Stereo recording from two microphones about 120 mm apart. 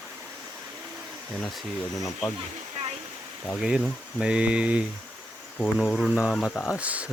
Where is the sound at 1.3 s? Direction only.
Centre (ahead or behind).